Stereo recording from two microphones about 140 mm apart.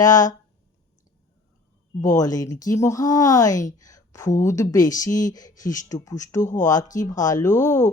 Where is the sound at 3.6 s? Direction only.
25° left (ahead or behind).